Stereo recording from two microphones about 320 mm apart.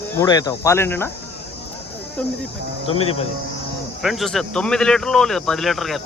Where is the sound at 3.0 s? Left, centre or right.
Centre.